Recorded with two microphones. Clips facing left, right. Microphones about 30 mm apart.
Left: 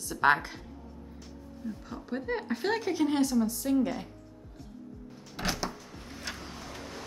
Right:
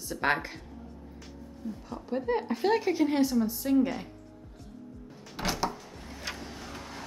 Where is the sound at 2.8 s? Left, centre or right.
Centre.